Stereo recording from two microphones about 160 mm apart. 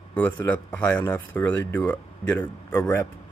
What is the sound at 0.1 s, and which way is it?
Speech, 10° left (ahead or behind).